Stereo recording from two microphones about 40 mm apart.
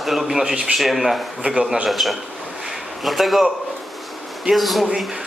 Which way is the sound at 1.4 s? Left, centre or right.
Right.